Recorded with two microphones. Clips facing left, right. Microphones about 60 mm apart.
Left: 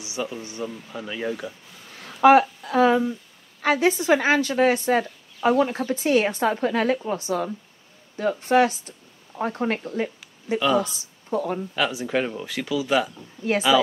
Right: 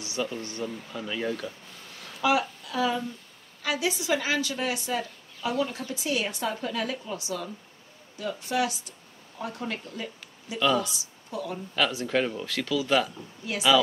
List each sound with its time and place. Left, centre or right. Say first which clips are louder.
0.0 s speech: left 1 dB; centre
2.2 s a woman's voice: left 10 dB; left
2.6 s a sound: left 9 dB; left
3.6 s a woman's voice: left 8 dB; left
11.7 s speech: even; centre